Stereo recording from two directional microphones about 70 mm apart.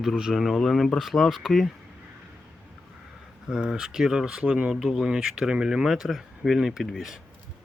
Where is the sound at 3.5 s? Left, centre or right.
Centre.